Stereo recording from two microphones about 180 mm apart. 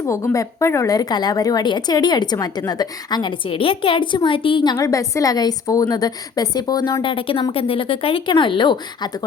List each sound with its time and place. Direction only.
0.0 s a woman's voice: 15° left (ahead or behind)